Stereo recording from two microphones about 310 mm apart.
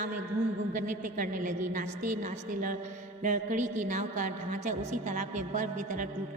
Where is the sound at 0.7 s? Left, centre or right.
Right.